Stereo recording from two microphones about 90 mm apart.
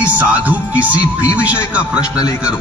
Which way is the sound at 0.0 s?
15° right (ahead or behind).